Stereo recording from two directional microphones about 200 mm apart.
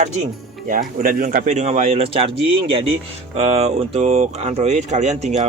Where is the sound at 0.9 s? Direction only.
45° right (ahead or behind); by 2.3 s 30° right (ahead or behind).